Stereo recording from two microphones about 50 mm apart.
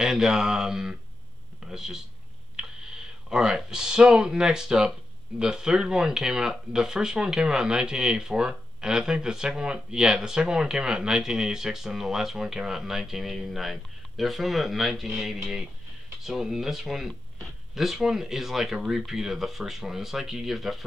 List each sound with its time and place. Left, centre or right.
0.0 s speech: centre
3.3 s speech: centre